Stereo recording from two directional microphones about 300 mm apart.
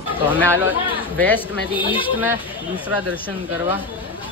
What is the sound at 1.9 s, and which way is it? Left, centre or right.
Speech, centre.